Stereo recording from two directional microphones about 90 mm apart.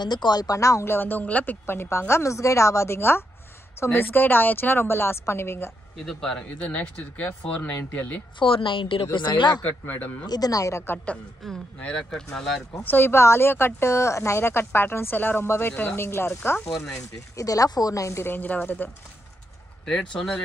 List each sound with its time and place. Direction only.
0.0 s a woman's voice: 50° left (ahead or behind); by 5.7 s 30° left (ahead or behind)
6.0 s speech: 5° left (ahead or behind)
8.4 s speech: 70° left (ahead or behind)
9.6 s speech: 20° left (ahead or behind)
10.2 s speech: 45° left (ahead or behind)
11.4 s speech: 5° left (ahead or behind)
12.8 s speech: 25° left (ahead or behind)
16.7 s speech: 5° left (ahead or behind)
17.4 s a woman's voice: 40° left (ahead or behind); by 18.9 s 20° left (ahead or behind)
19.9 s speech: 10° left (ahead or behind)